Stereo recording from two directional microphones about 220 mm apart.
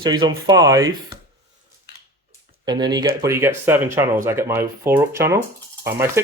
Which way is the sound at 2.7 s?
20° right (ahead or behind).